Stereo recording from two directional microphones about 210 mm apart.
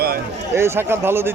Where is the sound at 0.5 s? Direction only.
10° right (ahead or behind).